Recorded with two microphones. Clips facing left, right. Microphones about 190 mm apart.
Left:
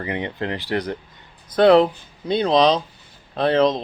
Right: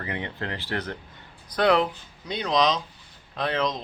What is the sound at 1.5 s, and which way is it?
Speech, 30° left (ahead or behind).